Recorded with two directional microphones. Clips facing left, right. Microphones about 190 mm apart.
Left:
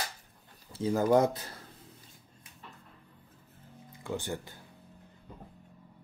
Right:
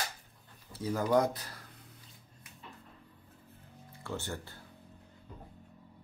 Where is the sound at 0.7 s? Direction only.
25° left (ahead or behind).